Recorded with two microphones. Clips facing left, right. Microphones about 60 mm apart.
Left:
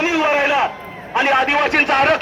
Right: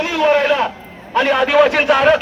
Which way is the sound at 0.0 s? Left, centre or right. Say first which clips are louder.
Right 2 dB; left.